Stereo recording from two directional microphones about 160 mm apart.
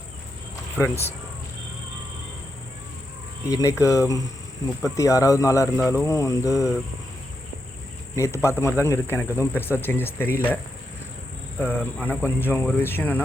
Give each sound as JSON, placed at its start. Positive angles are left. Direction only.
{"t": 0.8, "sound": "speech", "side_deg": 15}
{"t": 3.5, "sound": "cricket", "side_deg": 20}
{"t": 8.1, "sound": "speech", "side_deg": 20}
{"t": 11.6, "sound": "speech", "side_deg": 15}